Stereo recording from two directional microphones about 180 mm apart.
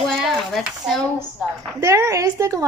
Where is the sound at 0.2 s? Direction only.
Centre (ahead or behind).